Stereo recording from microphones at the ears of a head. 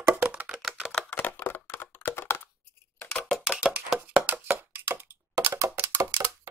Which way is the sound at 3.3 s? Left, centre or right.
Centre.